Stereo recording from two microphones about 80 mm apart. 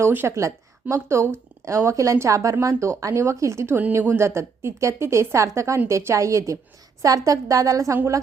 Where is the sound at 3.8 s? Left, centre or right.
Right.